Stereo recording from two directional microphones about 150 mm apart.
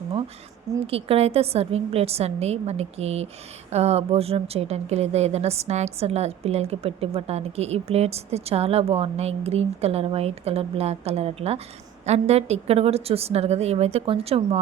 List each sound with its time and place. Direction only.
0.9 s a woman's voice: 40° right (ahead or behind)